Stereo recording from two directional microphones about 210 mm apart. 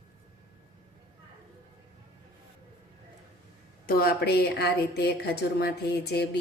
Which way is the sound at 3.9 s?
45° left (ahead or behind).